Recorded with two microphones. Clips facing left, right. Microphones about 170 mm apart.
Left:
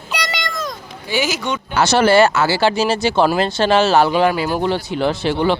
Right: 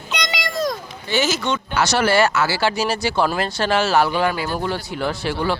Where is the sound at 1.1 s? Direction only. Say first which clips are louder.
Even; 10° left (ahead or behind).